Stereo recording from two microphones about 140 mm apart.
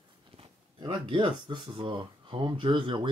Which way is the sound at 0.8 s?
35° right (ahead or behind).